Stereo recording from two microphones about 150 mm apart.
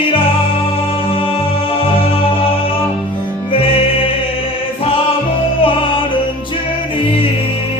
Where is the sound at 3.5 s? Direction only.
40° left (ahead or behind).